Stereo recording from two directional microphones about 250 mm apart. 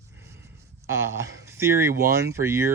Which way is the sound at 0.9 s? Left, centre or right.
Centre.